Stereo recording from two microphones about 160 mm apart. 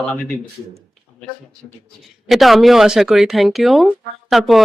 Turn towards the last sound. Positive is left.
turn(degrees=0)  # may be behind; listen again after turning